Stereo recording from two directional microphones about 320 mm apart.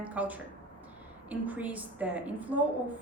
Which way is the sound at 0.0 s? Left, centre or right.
Centre.